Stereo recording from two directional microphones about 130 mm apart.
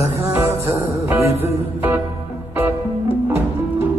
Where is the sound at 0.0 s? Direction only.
25° right (ahead or behind).